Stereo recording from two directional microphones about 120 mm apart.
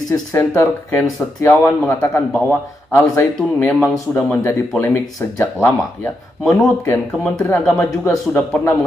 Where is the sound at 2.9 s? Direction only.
20° left (ahead or behind).